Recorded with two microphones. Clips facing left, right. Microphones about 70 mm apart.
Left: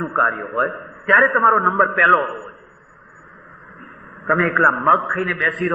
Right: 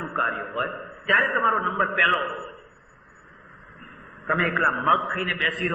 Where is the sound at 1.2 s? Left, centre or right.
Left.